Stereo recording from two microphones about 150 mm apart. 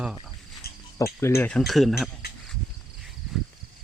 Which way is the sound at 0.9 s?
20° left (ahead or behind).